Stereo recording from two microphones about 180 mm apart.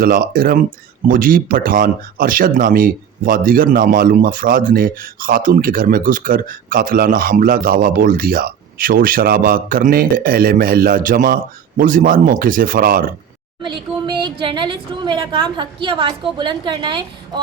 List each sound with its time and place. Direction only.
0.0 s speech: 55° right (ahead or behind)
13.6 s a woman's voice: 25° right (ahead or behind)